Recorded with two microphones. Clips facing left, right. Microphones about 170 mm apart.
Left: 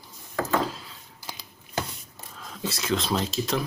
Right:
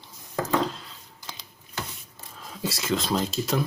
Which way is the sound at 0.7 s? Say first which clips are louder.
Even; 5° left (ahead or behind).